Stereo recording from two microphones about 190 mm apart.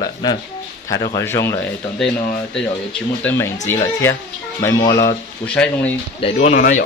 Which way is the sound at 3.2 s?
10° left (ahead or behind).